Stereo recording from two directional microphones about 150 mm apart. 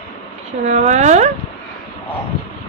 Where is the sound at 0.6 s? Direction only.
50° right (ahead or behind).